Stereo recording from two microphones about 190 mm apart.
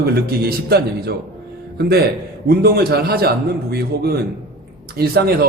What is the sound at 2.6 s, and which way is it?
A man's voice, 55° right (ahead or behind).